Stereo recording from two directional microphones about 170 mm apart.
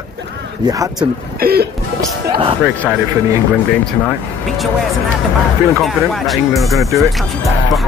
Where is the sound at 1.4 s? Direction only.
65° right (ahead or behind).